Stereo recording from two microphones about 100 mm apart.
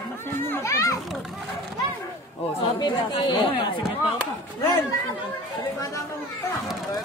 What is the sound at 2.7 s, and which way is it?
Speech, 45° left (ahead or behind).